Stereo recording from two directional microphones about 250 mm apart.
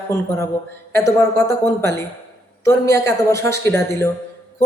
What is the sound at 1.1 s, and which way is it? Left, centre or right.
A woman's voice, centre.